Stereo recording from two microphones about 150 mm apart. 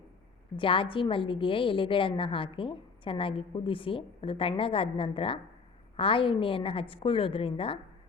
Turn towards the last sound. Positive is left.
turn(degrees=35)  # may be behind; listen again after turning